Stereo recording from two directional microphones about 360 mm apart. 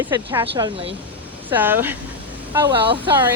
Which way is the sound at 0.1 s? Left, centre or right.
Centre.